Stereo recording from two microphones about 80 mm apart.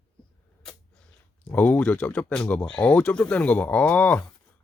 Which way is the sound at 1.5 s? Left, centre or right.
Centre.